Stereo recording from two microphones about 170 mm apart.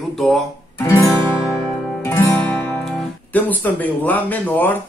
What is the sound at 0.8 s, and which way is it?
Guitar, 20° left (ahead or behind).